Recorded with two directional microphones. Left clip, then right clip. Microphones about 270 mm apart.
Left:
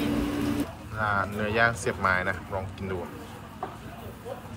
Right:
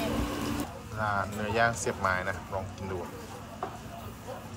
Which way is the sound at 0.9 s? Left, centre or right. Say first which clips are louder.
Left 4 dB; centre.